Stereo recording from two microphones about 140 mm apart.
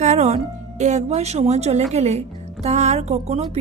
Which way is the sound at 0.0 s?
55° right (ahead or behind).